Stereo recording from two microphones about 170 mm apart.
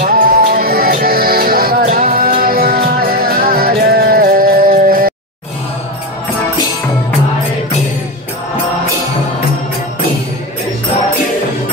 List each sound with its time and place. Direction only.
0.0 s music: 60° right (ahead or behind)